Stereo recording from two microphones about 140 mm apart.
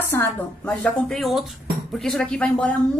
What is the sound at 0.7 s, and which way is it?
A woman's voice, 5° left (ahead or behind).